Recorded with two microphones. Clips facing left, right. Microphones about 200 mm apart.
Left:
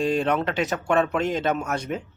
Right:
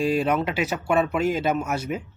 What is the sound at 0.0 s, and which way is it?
Speech, 5° right (ahead or behind).